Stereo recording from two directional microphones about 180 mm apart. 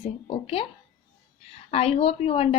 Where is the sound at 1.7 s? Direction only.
35° left (ahead or behind).